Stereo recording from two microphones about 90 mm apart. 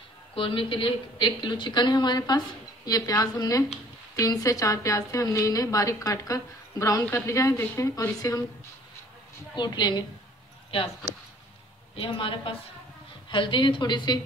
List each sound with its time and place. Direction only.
0.3 s a woman's voice: 75° left (ahead or behind); by 8.4 s 35° left (ahead or behind)
9.6 s a woman's voice: 55° left (ahead or behind)
11.9 s a woman's voice: 75° left (ahead or behind)
13.3 s a woman's voice: 65° left (ahead or behind)